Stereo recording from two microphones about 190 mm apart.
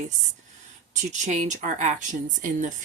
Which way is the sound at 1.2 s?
40° right (ahead or behind).